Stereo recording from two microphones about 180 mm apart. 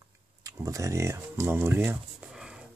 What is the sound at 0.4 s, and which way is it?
Speech, 20° right (ahead or behind).